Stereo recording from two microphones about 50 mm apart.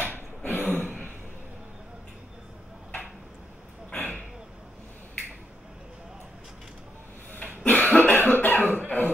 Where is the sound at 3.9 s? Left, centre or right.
Left.